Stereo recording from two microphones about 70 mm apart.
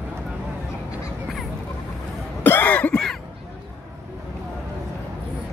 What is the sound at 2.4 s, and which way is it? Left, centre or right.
Cough, left.